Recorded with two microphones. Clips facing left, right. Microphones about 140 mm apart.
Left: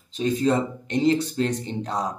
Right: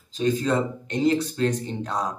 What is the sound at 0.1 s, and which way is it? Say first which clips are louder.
Speech: left 1 dB; 30° left (ahead or behind).